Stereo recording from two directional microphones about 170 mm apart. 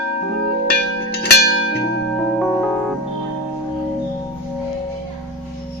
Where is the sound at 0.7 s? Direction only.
70° left (ahead or behind).